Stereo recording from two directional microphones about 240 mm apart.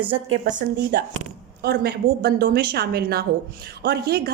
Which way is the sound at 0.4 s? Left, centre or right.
Right.